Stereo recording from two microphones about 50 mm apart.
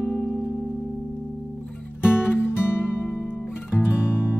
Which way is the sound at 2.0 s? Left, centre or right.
Left.